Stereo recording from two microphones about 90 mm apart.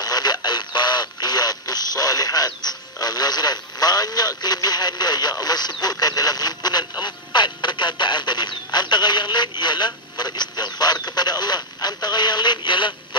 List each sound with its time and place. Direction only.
0.0 s radio: 50° left (ahead or behind)